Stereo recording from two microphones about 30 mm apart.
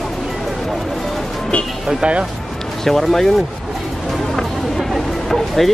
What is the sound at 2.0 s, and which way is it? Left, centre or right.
Speech, right.